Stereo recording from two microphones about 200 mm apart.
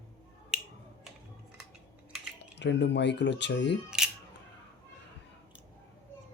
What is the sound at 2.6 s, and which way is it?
A man's voice, 60° left (ahead or behind).